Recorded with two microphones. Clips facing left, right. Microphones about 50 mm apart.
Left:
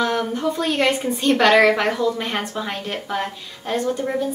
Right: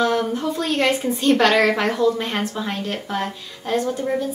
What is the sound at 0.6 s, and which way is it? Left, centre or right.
A woman's voice, centre.